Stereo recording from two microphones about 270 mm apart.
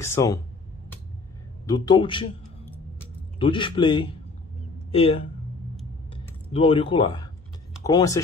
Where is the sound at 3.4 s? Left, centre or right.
Centre.